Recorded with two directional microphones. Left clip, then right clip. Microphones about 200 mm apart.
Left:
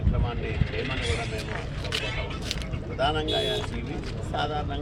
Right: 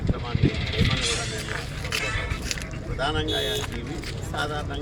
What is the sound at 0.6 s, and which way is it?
Speech, 35° right (ahead or behind).